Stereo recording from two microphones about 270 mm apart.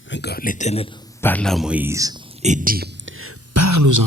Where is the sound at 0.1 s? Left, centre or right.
Left.